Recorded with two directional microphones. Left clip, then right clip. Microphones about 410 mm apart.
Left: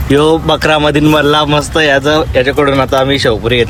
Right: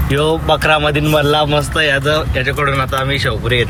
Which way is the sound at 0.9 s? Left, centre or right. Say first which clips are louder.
Left 4 dB; centre.